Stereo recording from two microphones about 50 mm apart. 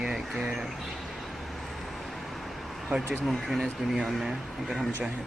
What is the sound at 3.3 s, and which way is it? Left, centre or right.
Speech, centre.